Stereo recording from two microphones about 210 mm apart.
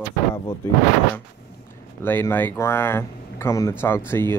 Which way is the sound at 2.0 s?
10° left (ahead or behind).